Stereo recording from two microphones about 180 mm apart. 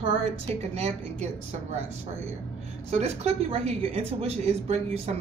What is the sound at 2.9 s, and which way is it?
Speech, 35° right (ahead or behind).